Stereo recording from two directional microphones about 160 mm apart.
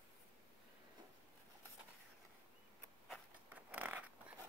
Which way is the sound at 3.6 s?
10° right (ahead or behind).